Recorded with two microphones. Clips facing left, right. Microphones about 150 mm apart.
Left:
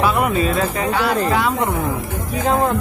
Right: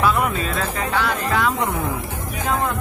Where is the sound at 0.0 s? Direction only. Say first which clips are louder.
Left 3 dB; 10° left (ahead or behind).